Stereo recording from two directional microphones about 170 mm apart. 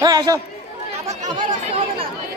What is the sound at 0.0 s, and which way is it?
Speech, 20° right (ahead or behind).